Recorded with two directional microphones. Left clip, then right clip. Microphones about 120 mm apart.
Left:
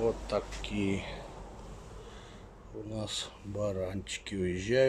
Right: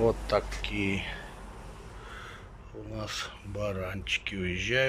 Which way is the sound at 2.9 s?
30° left (ahead or behind).